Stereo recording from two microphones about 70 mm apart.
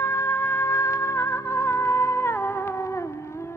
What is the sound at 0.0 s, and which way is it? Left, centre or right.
Music, left.